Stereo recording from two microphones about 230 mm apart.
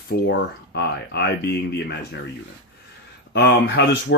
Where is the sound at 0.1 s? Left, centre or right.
Left.